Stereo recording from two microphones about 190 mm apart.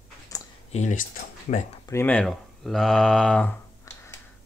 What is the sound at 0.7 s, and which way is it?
Speech, 40° left (ahead or behind).